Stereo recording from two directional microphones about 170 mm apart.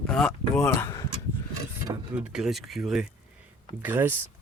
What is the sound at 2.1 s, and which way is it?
Speech, 5° right (ahead or behind).